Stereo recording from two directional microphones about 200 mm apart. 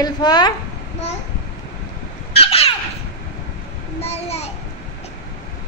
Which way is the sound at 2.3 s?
30° left (ahead or behind).